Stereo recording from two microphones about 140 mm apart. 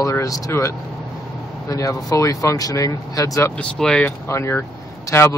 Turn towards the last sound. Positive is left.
turn(degrees=20)  # may be behind; listen again after turning